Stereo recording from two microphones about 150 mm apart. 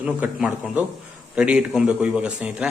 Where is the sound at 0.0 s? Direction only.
5° right (ahead or behind).